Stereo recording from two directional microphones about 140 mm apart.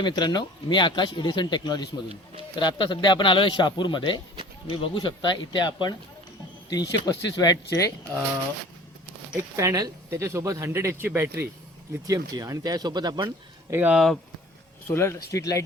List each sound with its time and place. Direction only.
0.0 s speech: 30° left (ahead or behind)
7.0 s speech: 25° left (ahead or behind)
9.6 s speech: 25° right (ahead or behind)
13.7 s speech: 15° right (ahead or behind)
13.9 s speech: centre (ahead or behind)
14.8 s speech: 20° left (ahead or behind)